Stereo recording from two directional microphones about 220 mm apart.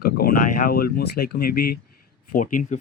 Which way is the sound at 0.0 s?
40° left (ahead or behind).